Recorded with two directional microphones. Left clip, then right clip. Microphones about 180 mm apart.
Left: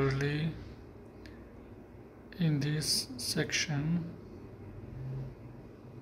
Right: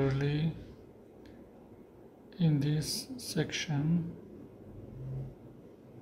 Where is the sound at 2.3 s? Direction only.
10° right (ahead or behind).